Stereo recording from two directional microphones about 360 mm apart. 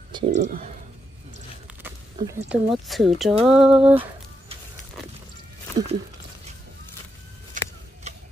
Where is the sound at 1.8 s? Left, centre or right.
Centre.